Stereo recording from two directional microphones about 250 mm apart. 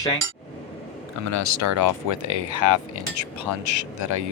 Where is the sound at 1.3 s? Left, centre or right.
Right.